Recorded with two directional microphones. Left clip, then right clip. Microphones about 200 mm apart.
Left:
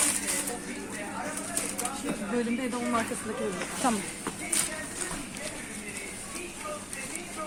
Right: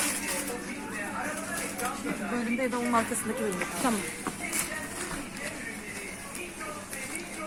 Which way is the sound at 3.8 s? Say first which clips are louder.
Left 2 dB; centre (ahead or behind).